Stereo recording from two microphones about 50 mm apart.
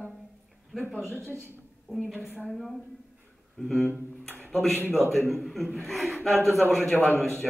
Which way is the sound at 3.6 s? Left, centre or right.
Centre.